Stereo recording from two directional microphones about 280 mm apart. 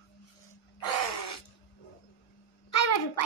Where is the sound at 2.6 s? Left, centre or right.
Left.